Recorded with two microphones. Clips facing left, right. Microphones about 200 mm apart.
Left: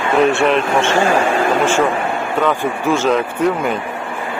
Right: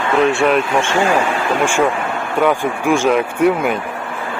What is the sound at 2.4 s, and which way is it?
Speech, 15° right (ahead or behind).